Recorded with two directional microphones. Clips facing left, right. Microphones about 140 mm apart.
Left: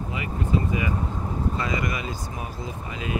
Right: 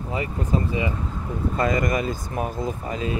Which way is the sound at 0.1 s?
35° right (ahead or behind).